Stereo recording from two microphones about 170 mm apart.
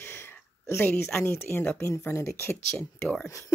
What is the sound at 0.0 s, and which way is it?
Speech, 15° left (ahead or behind).